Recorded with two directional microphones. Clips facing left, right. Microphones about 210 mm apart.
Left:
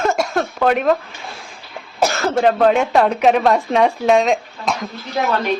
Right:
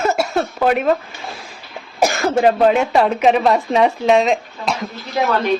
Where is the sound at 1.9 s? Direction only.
15° right (ahead or behind).